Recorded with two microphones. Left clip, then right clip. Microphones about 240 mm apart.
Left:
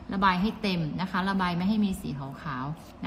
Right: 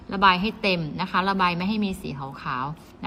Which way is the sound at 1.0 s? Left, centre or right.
Centre.